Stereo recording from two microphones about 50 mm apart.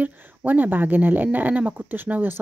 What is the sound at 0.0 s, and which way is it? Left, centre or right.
Speech, right.